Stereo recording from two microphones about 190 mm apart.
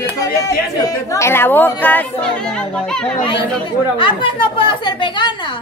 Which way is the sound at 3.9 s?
25° left (ahead or behind).